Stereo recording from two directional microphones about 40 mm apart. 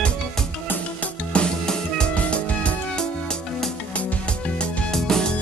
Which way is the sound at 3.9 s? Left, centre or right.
Left.